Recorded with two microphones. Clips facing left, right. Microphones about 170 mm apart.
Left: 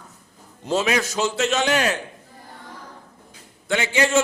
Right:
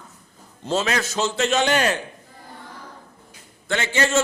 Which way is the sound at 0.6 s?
15° left (ahead or behind).